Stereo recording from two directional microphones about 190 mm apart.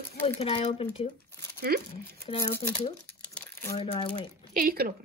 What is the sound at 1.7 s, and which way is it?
Speech, 55° right (ahead or behind).